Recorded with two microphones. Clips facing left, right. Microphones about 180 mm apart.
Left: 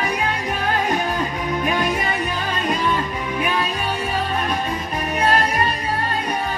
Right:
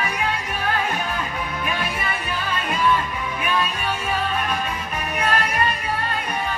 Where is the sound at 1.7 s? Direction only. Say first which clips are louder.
Left 7 dB; 40° left (ahead or behind).